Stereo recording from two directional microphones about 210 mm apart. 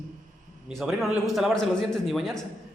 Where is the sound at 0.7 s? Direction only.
Centre (ahead or behind).